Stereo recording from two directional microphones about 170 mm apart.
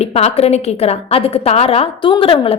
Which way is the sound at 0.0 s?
40° left (ahead or behind).